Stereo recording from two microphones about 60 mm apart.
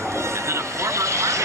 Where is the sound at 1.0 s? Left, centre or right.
Right.